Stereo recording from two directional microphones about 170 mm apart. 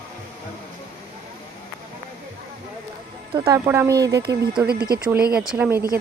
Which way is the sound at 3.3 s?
30° right (ahead or behind).